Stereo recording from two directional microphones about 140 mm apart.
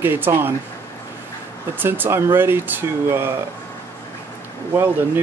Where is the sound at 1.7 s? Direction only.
15° right (ahead or behind).